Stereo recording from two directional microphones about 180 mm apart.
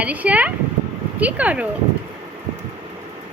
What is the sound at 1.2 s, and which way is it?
Speech, 10° right (ahead or behind).